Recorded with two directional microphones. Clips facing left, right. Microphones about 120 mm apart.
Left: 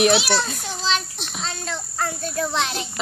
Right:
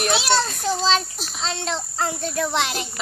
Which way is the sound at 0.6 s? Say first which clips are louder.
Right 5 dB; 35° right (ahead or behind).